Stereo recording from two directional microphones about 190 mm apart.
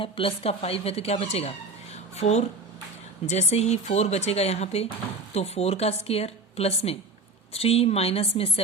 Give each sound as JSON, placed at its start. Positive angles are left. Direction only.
{"t": 0.0, "sound": "speech", "side_deg": 30}